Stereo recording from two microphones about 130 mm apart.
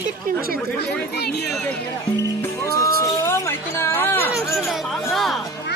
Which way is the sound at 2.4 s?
25° left (ahead or behind).